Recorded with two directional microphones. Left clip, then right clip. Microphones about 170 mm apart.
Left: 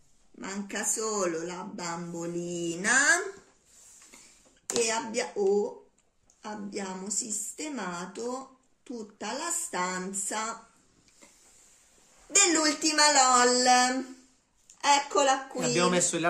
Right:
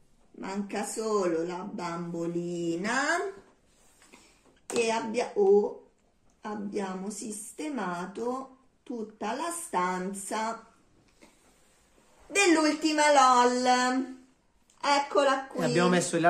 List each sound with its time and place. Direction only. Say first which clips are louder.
0.4 s speech: right 1 dB; 35° left (ahead or behind)
4.8 s a woman's voice: right 1 dB; 30° left (ahead or behind)
12.4 s a woman's voice: right 1 dB; 50° left (ahead or behind)
15.6 s speech: right 1 dB; centre (ahead or behind)